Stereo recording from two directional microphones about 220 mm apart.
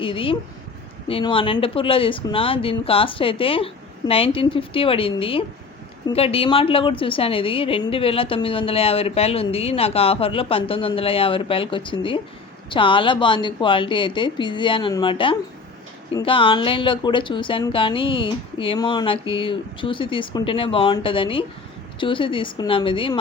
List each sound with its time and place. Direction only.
0.0 s a woman's voice: 25° left (ahead or behind)